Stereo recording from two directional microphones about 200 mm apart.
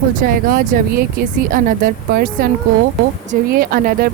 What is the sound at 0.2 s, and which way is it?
Speech, 45° right (ahead or behind).